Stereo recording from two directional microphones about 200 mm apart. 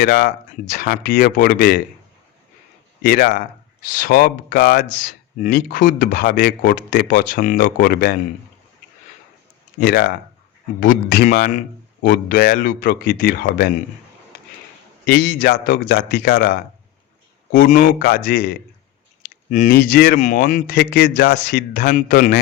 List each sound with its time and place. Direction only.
0.0 s speech: 55° left (ahead or behind)
0.7 s speech: 45° left (ahead or behind)
3.0 s speech: 45° left (ahead or behind)
4.8 s speech: 40° left (ahead or behind)
9.8 s speech: 55° left (ahead or behind)
15.0 s a man's voice: 50° left (ahead or behind)